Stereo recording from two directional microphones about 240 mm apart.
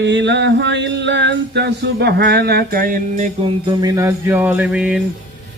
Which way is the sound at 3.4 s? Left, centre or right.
Centre.